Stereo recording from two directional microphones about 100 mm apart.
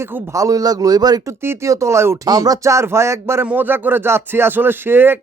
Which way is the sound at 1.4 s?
30° right (ahead or behind).